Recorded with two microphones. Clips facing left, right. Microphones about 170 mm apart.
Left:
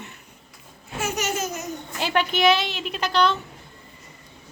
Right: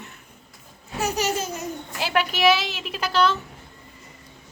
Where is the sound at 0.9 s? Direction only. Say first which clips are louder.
Right 2 dB; 35° right (ahead or behind).